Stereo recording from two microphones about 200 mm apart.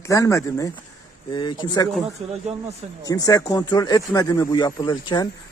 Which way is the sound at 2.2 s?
30° right (ahead or behind).